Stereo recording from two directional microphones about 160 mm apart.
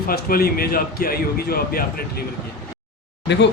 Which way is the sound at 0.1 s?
70° left (ahead or behind).